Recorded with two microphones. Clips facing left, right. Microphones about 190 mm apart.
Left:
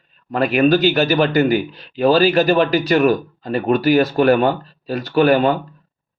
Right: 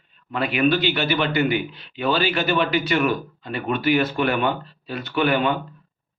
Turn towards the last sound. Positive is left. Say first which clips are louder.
# left 7 dB
turn(degrees=40)  # may be behind; listen again after turning